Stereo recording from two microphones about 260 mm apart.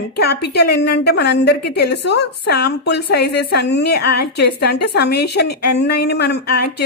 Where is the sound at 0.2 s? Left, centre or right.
Left.